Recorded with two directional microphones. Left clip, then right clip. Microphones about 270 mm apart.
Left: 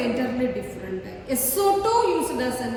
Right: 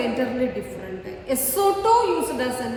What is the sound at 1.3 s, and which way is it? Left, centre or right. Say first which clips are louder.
Speech: even; centre.